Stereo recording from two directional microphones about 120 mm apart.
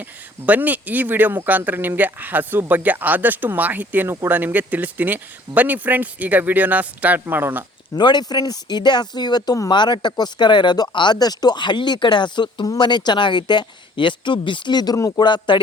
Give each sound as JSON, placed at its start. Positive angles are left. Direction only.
{"t": 0.0, "sound": "speech", "side_deg": -15}
{"t": 7.9, "sound": "speech", "side_deg": 35}